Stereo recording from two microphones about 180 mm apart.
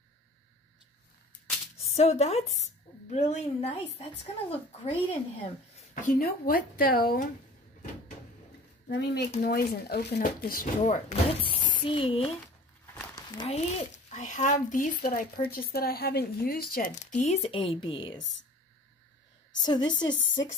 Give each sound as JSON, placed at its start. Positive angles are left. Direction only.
{"t": 1.9, "sound": "a woman's voice", "side_deg": 35}
{"t": 6.0, "sound": "speech", "side_deg": 55}
{"t": 8.8, "sound": "speech", "side_deg": 65}
{"t": 11.8, "sound": "a woman's voice", "side_deg": 30}
{"t": 13.1, "sound": "a sound", "side_deg": 25}
{"t": 13.6, "sound": "speech", "side_deg": 40}
{"t": 19.6, "sound": "a woman's voice", "side_deg": 25}